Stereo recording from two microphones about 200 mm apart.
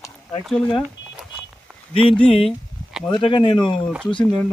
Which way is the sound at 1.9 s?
25° left (ahead or behind).